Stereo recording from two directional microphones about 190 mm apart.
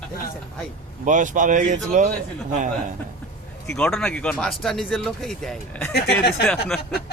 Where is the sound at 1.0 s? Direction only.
40° right (ahead or behind).